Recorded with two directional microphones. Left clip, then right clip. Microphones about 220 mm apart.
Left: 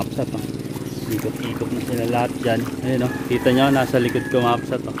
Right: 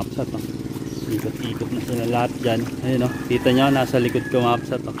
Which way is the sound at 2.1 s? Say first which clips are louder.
Even; 30° right (ahead or behind).